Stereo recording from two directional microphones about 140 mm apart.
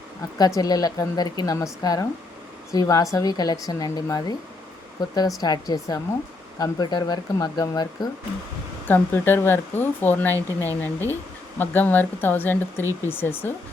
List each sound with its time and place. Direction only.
0.3 s a woman's voice: 25° left (ahead or behind)
8.9 s speech: 15° left (ahead or behind)